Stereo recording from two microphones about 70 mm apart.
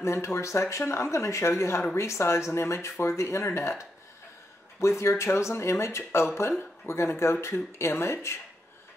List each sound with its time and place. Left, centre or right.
0.0 s speech: left